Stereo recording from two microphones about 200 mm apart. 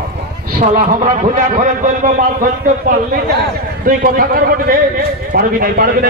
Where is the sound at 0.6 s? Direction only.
40° right (ahead or behind).